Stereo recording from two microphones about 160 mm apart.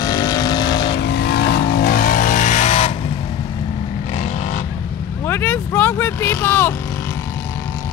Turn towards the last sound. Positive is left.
turn(degrees=10)  # may be behind; listen again after turning